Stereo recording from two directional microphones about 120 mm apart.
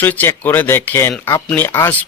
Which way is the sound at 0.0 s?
15° left (ahead or behind).